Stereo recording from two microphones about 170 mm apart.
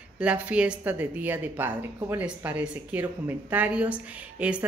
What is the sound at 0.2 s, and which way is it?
A woman's voice, 5° right (ahead or behind).